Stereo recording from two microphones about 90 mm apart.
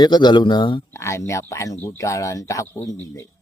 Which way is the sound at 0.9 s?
30° left (ahead or behind).